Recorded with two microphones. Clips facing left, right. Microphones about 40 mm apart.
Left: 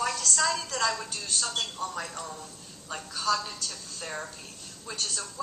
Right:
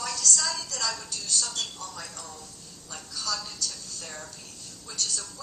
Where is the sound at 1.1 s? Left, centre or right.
Left.